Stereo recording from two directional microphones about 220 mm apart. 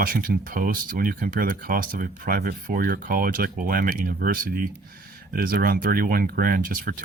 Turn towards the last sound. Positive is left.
turn(degrees=-40)  # may be behind; listen again after turning